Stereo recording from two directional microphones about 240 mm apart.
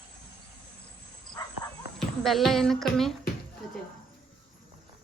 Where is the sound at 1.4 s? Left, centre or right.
Centre.